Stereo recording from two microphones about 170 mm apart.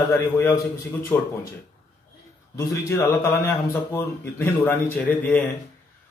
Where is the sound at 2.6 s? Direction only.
15° left (ahead or behind).